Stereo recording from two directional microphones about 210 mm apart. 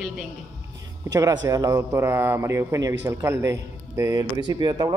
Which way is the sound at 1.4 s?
15° right (ahead or behind).